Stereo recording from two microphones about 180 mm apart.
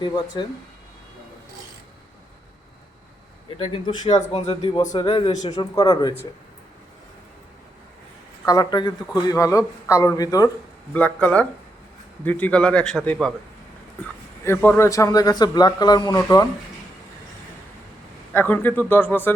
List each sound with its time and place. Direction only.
0.0 s a man's voice: 25° left (ahead or behind)
3.6 s a man's voice: 30° left (ahead or behind)
8.4 s a man's voice: 20° left (ahead or behind)
10.9 s a man's voice: 10° left (ahead or behind)
14.4 s a man's voice: 10° left (ahead or behind)
18.3 s speech: 10° left (ahead or behind)